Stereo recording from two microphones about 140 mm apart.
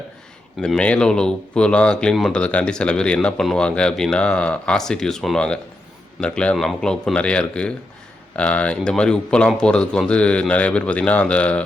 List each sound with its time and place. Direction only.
0.6 s speech: 5° left (ahead or behind)